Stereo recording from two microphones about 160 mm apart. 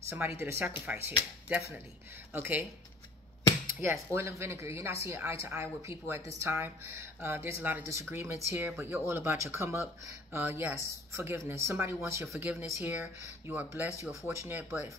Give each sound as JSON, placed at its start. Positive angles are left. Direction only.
{"t": 0.1, "sound": "speech", "side_deg": -15}
{"t": 2.3, "sound": "speech", "side_deg": -15}
{"t": 3.8, "sound": "speech", "side_deg": -15}